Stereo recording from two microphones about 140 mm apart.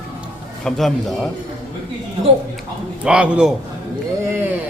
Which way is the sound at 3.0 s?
5° right (ahead or behind).